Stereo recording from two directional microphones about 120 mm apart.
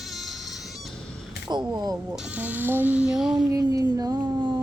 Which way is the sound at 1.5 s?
35° right (ahead or behind).